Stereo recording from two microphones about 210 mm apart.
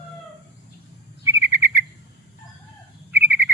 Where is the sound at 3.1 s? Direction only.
10° right (ahead or behind).